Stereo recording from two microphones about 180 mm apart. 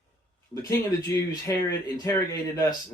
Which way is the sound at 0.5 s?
15° left (ahead or behind).